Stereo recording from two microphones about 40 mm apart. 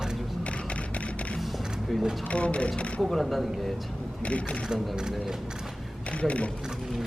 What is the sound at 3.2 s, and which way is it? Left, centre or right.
Speech, centre.